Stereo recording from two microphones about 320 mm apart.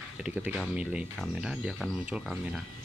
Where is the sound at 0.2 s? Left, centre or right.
Centre.